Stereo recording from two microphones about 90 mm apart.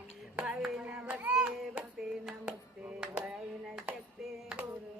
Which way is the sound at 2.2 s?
10° right (ahead or behind).